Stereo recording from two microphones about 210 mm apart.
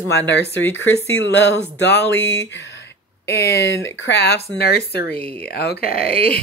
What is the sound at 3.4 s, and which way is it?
Speech, 55° left (ahead or behind).